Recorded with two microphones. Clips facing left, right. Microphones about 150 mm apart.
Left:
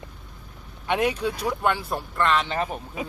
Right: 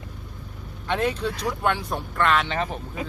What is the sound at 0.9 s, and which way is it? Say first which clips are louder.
Speech: left 1 dB; 10° left (ahead or behind).